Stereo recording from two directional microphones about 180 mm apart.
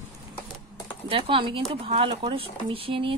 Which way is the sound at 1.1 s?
30° right (ahead or behind).